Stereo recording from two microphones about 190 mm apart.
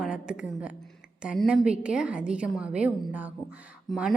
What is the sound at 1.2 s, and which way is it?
A woman's voice, 5° right (ahead or behind).